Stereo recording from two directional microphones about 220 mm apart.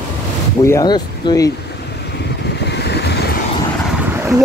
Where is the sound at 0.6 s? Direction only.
15° left (ahead or behind).